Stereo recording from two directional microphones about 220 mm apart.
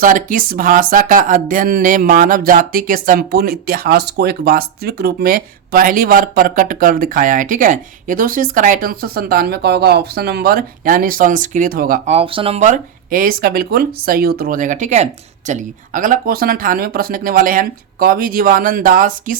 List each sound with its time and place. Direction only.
0.0 s speech: 40° right (ahead or behind)